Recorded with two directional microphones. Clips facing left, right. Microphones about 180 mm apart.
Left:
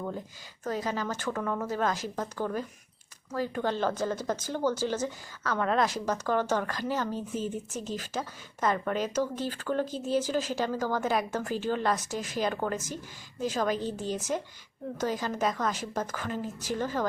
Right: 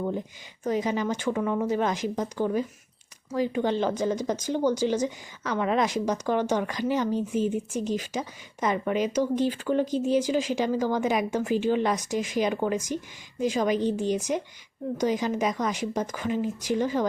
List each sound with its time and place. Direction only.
0.6 s speech: 15° right (ahead or behind)